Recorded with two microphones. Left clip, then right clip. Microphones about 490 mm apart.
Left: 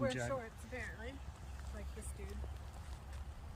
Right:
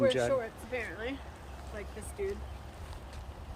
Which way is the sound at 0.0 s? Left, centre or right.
Centre.